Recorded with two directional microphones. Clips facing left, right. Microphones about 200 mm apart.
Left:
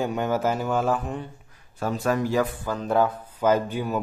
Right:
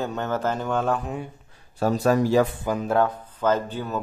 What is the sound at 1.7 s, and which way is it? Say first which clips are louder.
Speech: right 4 dB; 35° right (ahead or behind).